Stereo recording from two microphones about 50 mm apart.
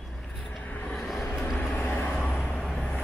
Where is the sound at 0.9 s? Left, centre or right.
Centre.